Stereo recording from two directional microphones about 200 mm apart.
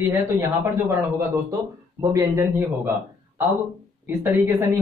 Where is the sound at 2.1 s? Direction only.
15° right (ahead or behind).